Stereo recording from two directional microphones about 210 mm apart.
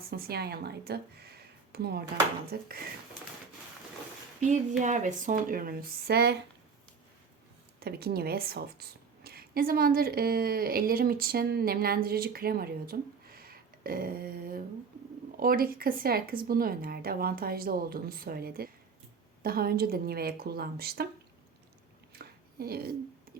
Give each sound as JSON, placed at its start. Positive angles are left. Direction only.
{"t": 0.1, "sound": "a woman's voice", "side_deg": -50}
{"t": 4.4, "sound": "speech", "side_deg": -35}
{"t": 7.8, "sound": "a woman's voice", "side_deg": -50}
{"t": 22.2, "sound": "a sound", "side_deg": -45}
{"t": 23.3, "sound": "music", "side_deg": -45}